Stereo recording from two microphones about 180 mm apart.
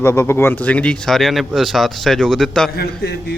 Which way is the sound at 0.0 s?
15° left (ahead or behind).